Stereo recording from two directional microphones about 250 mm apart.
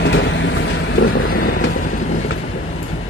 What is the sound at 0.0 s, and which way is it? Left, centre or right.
Vehicle, left.